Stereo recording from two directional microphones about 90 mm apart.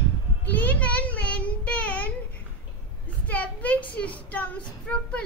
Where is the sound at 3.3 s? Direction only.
15° left (ahead or behind).